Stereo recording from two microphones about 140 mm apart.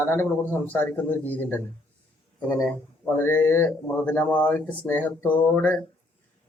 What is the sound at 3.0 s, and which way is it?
A man's voice, 15° left (ahead or behind).